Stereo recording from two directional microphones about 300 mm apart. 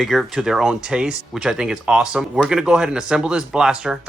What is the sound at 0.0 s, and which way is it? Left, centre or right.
Speech, centre.